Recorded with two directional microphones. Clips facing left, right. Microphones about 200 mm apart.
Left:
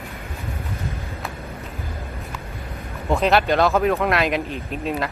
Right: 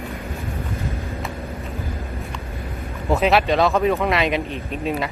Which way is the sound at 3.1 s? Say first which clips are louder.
Right 1 dB; centre (ahead or behind).